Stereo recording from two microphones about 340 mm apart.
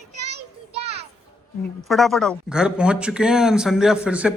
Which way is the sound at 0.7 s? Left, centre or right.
Centre.